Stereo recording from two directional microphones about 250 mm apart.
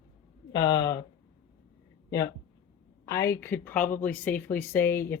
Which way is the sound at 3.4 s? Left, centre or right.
Centre.